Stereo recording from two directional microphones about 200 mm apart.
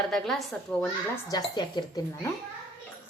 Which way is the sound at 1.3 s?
20° left (ahead or behind).